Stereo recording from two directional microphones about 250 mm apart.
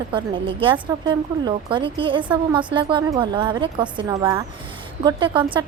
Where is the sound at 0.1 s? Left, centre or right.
Centre.